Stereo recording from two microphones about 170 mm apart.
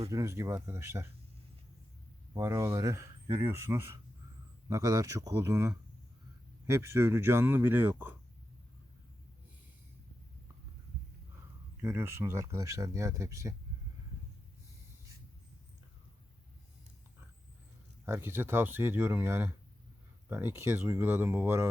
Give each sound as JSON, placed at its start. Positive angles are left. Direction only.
{"t": 0.1, "sound": "speech", "side_deg": -15}
{"t": 2.3, "sound": "speech", "side_deg": -20}
{"t": 11.8, "sound": "speech", "side_deg": -15}
{"t": 18.0, "sound": "speech", "side_deg": -15}